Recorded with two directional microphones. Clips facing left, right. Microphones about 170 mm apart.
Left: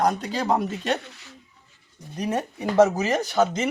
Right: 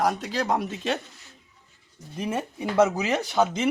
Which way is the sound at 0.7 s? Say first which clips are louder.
Left 2 dB; 75° left (ahead or behind).